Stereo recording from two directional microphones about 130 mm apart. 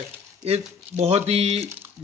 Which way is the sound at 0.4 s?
55° right (ahead or behind).